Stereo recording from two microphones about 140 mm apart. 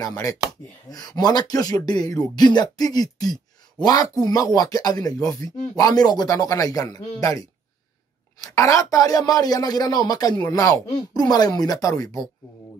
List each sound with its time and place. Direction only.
0.0 s speech: 25° left (ahead or behind)